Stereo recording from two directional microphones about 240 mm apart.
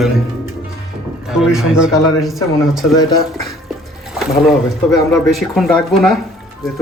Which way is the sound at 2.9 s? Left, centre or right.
Centre.